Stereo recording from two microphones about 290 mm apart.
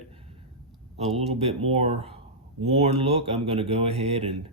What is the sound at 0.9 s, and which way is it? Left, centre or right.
Speech, right.